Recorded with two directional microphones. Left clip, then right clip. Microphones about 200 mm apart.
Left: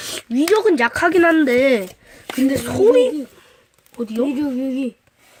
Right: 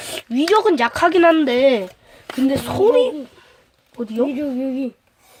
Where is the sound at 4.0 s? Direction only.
25° left (ahead or behind).